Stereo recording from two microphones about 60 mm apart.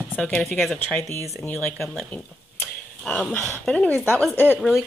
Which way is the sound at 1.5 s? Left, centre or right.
Left.